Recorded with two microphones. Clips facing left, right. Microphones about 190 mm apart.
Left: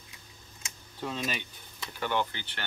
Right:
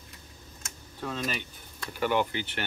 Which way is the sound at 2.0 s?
10° right (ahead or behind).